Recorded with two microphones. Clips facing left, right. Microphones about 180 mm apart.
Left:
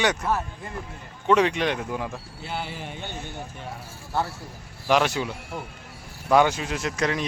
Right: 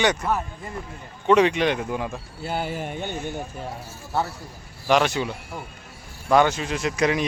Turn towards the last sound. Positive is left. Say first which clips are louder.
# right 4 dB
turn(degrees=-10)  # may be behind; listen again after turning